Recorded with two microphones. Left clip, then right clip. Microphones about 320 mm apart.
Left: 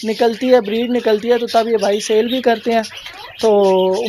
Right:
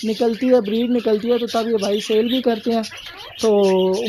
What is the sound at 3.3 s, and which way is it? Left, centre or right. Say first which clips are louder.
Speech: left 4 dB; left.